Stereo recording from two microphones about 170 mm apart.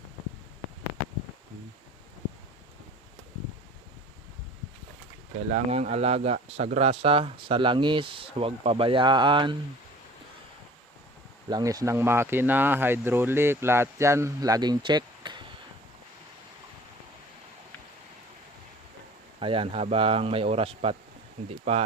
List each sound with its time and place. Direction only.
5.5 s speech: 40° right (ahead or behind)
11.4 s speech: 20° right (ahead or behind)
19.4 s speech: 30° right (ahead or behind)